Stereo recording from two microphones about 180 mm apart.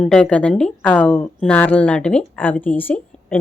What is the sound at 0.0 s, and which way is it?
Speech, 5° left (ahead or behind).